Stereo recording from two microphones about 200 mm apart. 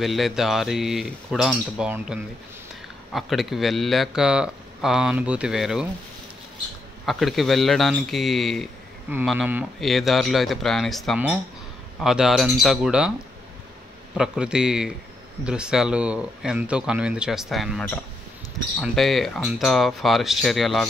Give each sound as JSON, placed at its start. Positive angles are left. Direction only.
{"t": 0.0, "sound": "speech", "side_deg": 0}
{"t": 7.1, "sound": "speech", "side_deg": 0}
{"t": 14.1, "sound": "speech", "side_deg": -5}